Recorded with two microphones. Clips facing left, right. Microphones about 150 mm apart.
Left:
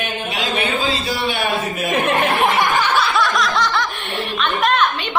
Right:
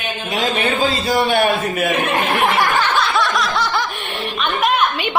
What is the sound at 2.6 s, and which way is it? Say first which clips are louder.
Snicker: even; 15° left (ahead or behind).